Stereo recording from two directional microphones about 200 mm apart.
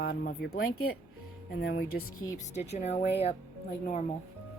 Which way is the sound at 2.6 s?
35° left (ahead or behind).